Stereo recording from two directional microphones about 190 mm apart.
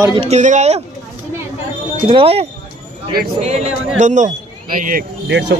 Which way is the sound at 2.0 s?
30° right (ahead or behind).